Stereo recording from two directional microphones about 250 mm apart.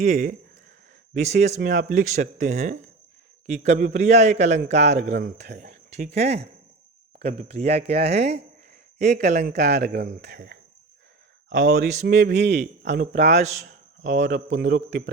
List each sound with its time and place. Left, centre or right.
0.0 s a man's voice: right
11.6 s a man's voice: right
12.0 s speech: right
13.1 s a man's voice: right
14.3 s speech: right